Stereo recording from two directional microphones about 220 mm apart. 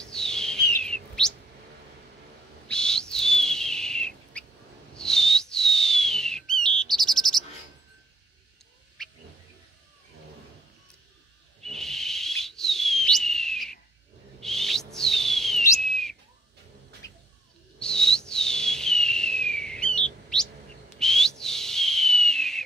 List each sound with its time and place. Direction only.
0.0 s chirp: 5° left (ahead or behind)
2.7 s bird: 5° left (ahead or behind)
9.0 s a sound: 5° left (ahead or behind)
11.6 s bird: centre (ahead or behind)
14.4 s a sound: centre (ahead or behind)
15.8 s bird: centre (ahead or behind)
17.7 s bird: 5° left (ahead or behind)
18.3 s a sound: 5° left (ahead or behind)
21.0 s whistle: centre (ahead or behind)
21.4 s owl: centre (ahead or behind)